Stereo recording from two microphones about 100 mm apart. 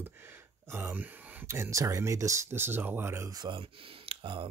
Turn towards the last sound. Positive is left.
turn(degrees=-60)  # may be behind; listen again after turning